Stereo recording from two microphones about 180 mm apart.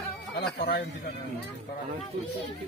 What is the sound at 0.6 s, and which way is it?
Speech, 65° left (ahead or behind).